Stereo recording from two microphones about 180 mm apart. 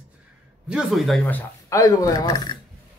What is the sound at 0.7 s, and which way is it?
Speech, 5° right (ahead or behind).